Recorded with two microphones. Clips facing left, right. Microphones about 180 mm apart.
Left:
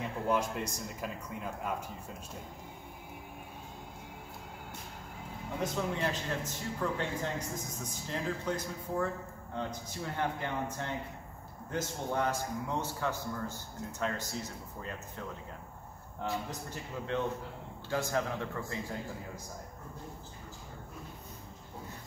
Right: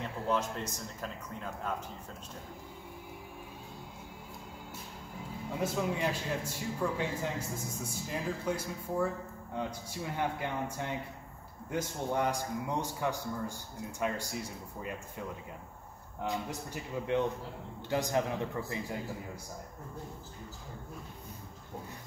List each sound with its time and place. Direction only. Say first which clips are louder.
0.3 s a man's voice: left 1 dB; 10° left (ahead or behind)
5.6 s a man's voice: right 1 dB; 10° right (ahead or behind)